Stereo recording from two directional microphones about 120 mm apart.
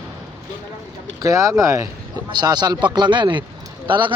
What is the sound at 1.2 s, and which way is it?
Speech, 25° right (ahead or behind).